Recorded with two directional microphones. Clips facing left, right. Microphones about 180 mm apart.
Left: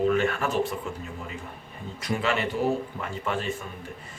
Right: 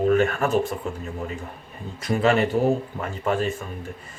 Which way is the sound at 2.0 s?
45° right (ahead or behind).